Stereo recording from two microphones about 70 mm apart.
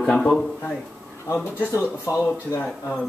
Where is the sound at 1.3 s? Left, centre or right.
Left.